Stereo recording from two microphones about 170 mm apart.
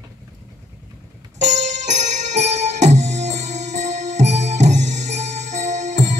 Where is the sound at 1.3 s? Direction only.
45° right (ahead or behind).